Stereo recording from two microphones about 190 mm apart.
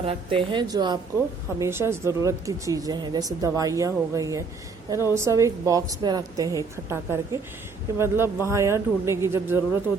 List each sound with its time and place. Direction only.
0.0 s a woman's voice: 30° right (ahead or behind); by 9.8 s 15° right (ahead or behind)